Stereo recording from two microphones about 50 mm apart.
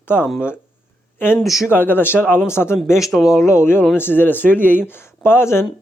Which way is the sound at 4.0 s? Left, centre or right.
Left.